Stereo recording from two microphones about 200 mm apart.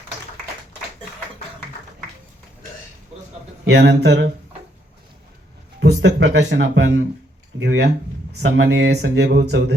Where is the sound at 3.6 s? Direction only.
60° right (ahead or behind).